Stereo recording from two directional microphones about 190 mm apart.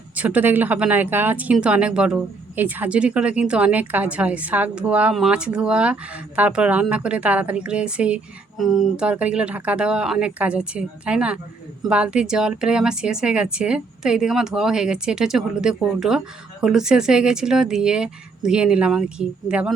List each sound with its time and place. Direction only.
0.2 s speech: 10° right (ahead or behind)